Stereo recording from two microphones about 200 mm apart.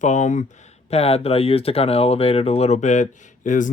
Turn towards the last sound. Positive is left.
turn(degrees=40)  # may be behind; listen again after turning